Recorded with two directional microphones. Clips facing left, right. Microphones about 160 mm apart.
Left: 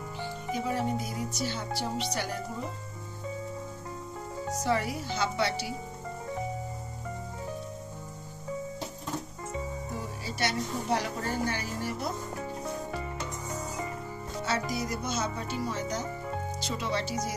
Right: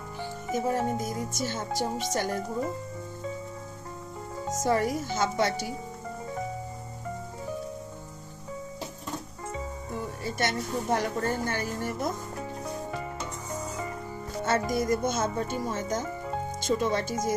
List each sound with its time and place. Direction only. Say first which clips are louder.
0.5 s speech: right 3 dB; 45° right (ahead or behind)
4.5 s speech: right 4 dB; 45° right (ahead or behind)
10.2 s speech: right 2 dB; 50° right (ahead or behind)
12.6 s music: right 1 dB; centre (ahead or behind)
14.4 s speech: right 6 dB; 50° right (ahead or behind)